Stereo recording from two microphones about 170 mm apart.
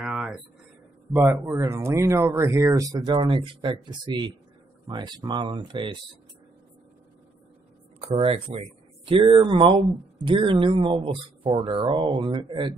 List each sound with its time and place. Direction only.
0.0 s a sound: 5° right (ahead or behind)
1.1 s speech: 10° right (ahead or behind); by 5.9 s 30° right (ahead or behind)
8.0 s speech: 35° right (ahead or behind)